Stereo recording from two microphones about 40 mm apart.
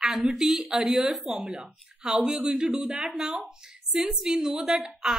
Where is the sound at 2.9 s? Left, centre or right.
Centre.